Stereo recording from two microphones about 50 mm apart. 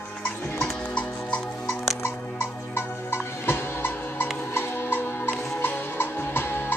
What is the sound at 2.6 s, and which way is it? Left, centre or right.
Music, left.